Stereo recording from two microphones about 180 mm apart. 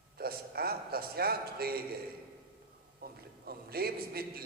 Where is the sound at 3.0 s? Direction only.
60° right (ahead or behind).